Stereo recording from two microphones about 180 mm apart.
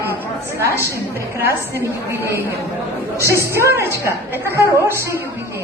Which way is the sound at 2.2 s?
15° right (ahead or behind).